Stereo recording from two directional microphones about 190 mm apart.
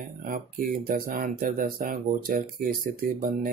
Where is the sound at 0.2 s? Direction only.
45° right (ahead or behind).